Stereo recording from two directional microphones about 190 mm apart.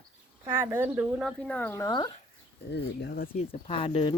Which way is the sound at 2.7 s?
60° left (ahead or behind).